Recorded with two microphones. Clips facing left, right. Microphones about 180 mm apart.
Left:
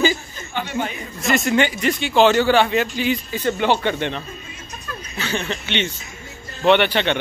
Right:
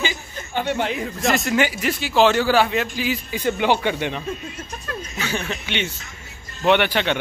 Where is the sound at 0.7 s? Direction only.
80° right.